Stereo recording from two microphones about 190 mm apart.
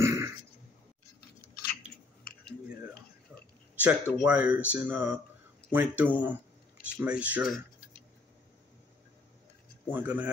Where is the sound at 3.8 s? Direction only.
10° right (ahead or behind).